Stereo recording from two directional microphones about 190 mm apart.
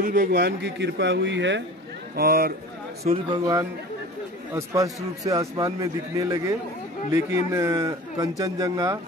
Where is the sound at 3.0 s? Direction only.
20° right (ahead or behind).